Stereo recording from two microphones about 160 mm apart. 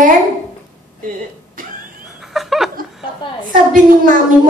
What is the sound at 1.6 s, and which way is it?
Printer, 60° right (ahead or behind).